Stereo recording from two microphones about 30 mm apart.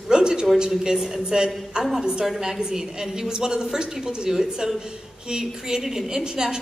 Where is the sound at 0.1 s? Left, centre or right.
Right.